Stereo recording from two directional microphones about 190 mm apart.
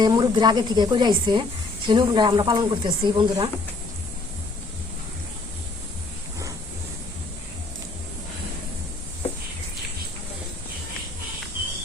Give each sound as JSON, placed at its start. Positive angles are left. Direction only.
{"t": 0.0, "sound": "speech", "side_deg": -20}